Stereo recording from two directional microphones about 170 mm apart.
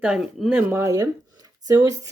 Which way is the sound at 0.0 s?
5° right (ahead or behind).